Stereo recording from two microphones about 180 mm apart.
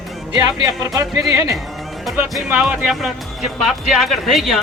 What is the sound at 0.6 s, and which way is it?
Speech, 20° right (ahead or behind).